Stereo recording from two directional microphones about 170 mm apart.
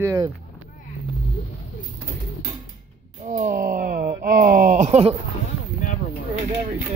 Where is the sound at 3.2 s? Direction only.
45° right (ahead or behind).